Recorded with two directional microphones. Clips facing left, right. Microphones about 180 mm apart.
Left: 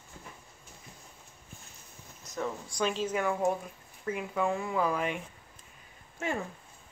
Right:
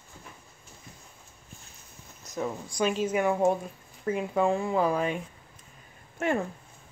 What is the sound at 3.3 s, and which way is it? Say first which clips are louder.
Speech: right 5 dB; 25° right (ahead or behind).